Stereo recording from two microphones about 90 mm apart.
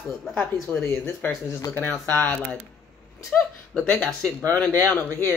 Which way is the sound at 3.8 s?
10° left (ahead or behind).